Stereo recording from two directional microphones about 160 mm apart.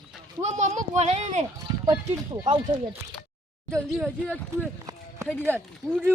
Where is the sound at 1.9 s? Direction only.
25° right (ahead or behind).